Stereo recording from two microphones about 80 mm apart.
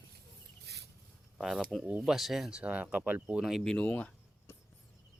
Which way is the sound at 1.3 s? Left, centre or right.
Centre.